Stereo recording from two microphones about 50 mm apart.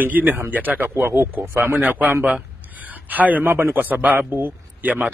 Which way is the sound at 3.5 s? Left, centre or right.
Right.